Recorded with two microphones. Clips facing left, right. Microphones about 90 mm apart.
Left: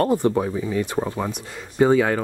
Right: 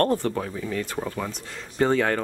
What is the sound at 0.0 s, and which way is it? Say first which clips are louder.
Speech: left 4 dB; 15° left (ahead or behind).